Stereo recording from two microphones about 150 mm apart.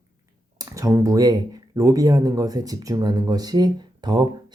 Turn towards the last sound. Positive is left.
turn(degrees=-30)  # may be behind; listen again after turning